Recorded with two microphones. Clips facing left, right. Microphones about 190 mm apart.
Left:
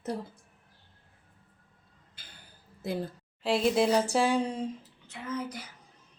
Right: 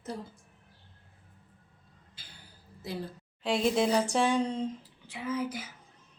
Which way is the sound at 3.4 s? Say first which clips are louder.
Left 2 dB; 5° left (ahead or behind).